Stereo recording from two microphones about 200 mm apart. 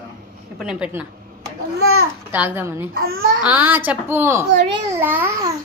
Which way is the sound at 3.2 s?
80° right.